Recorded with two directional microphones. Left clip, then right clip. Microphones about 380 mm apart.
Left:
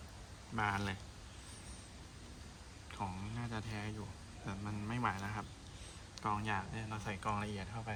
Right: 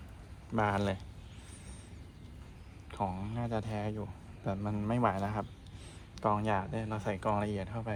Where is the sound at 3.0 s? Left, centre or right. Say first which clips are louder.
Right 8 dB; centre.